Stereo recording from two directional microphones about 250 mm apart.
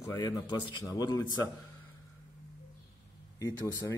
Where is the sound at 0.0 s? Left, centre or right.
Centre.